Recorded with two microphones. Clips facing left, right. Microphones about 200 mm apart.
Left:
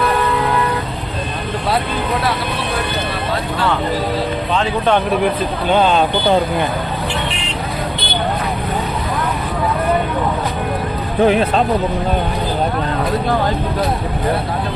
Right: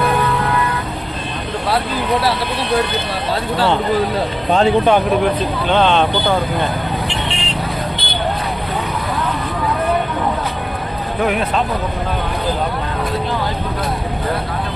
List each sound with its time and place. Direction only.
5.6 s speech: 10° left (ahead or behind)
11.2 s speech: 30° left (ahead or behind)